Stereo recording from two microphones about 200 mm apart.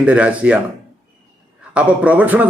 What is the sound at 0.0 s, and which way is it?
Speech, 5° right (ahead or behind).